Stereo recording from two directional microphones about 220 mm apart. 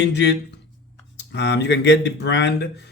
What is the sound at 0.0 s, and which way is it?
Speech, 50° left (ahead or behind).